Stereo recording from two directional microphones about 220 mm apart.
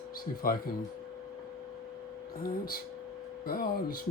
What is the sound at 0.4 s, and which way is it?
Speech, 40° left (ahead or behind).